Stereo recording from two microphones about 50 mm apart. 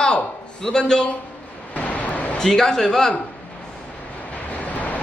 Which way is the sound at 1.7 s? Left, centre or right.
Left.